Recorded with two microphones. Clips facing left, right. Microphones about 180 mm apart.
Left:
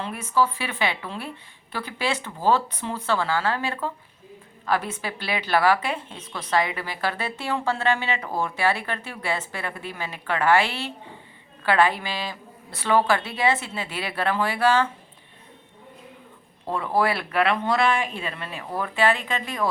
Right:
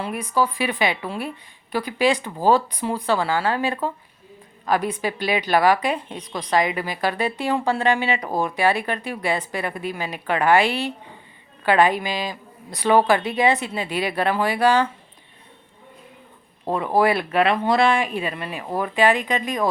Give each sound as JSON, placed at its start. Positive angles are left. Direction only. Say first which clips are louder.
{"t": 0.0, "sound": "a woman's voice", "louder": "right 1 dB", "side_deg": -15}
{"t": 16.7, "sound": "a woman's voice", "louder": "right 4 dB", "side_deg": -15}